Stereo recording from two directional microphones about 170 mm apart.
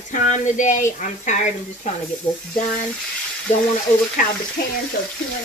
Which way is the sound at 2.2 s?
15° left (ahead or behind).